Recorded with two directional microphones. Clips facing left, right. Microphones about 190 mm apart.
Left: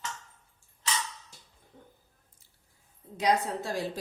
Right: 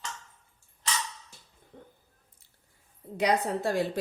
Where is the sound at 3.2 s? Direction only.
60° right (ahead or behind).